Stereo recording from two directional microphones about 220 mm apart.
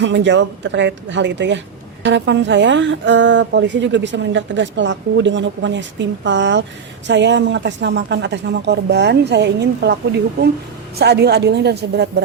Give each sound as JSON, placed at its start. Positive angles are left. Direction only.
{"t": 0.0, "sound": "speech", "side_deg": -55}